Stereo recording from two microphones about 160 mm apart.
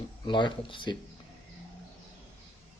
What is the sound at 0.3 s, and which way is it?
Speech, 30° left (ahead or behind).